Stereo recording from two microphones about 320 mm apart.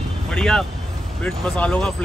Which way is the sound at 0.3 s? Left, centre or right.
Centre.